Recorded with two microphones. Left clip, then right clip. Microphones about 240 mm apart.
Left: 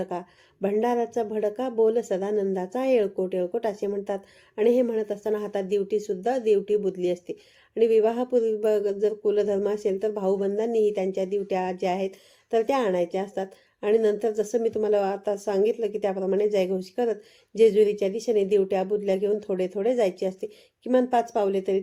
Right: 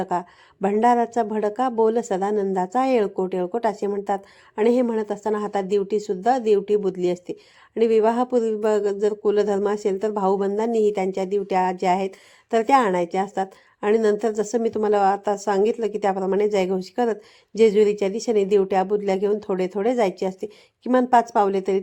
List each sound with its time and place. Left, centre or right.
0.0 s speech: centre